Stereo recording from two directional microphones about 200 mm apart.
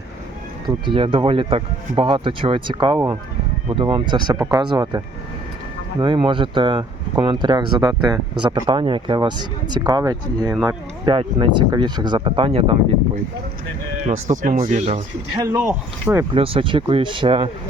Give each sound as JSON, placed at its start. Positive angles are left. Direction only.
{"t": 0.9, "sound": "speech", "side_deg": -25}
{"t": 14.1, "sound": "speech", "side_deg": -40}
{"t": 15.4, "sound": "speech", "side_deg": -10}
{"t": 16.3, "sound": "speech", "side_deg": -25}